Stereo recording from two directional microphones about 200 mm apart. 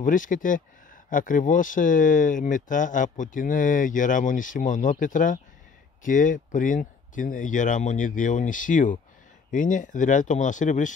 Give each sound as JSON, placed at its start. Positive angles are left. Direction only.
{"t": 0.0, "sound": "speech", "side_deg": 40}